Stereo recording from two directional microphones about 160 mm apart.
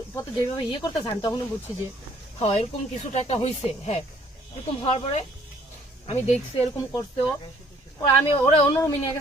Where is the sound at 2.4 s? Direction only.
40° left (ahead or behind).